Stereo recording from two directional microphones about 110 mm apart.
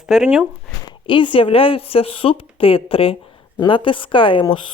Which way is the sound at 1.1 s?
50° left (ahead or behind).